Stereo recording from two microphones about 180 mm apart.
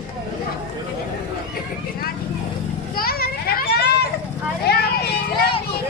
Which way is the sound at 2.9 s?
55° left (ahead or behind).